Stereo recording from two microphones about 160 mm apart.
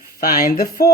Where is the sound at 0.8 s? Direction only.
75° left (ahead or behind).